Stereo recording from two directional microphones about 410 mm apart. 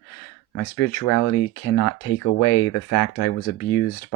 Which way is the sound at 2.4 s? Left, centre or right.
Left.